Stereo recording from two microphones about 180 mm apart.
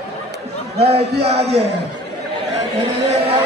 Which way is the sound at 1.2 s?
35° right (ahead or behind).